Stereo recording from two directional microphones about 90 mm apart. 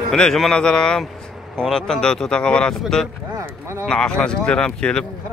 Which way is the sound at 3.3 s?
35° right (ahead or behind).